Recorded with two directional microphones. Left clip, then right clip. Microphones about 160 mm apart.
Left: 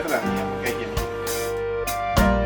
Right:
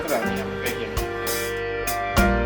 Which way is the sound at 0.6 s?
Centre (ahead or behind).